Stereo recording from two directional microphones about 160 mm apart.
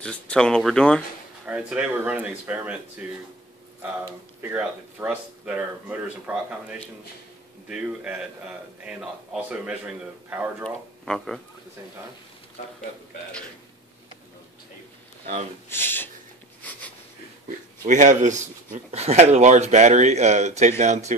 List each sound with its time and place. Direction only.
0.0 s speech: 5° left (ahead or behind)
1.4 s speech: 10° right (ahead or behind)
4.0 s speech: 15° right (ahead or behind)
15.7 s speech: 15° left (ahead or behind)
17.8 s speech: 50° right (ahead or behind)